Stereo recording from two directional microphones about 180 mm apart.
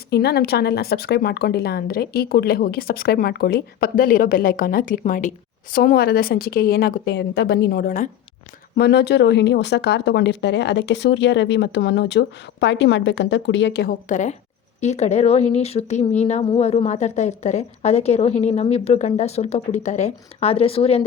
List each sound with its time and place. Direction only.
0.1 s speech: 65° left (ahead or behind); by 8.1 s 50° left (ahead or behind)
8.7 s speech: 65° left (ahead or behind)
14.1 s a woman's voice: 40° left (ahead or behind)